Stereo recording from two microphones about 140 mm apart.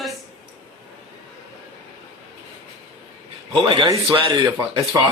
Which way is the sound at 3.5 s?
35° right (ahead or behind).